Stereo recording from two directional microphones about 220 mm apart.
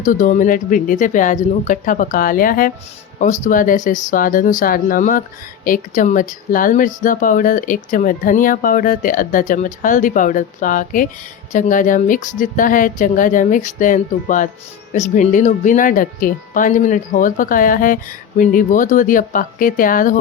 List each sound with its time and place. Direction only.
0.0 s speech: 35° left (ahead or behind)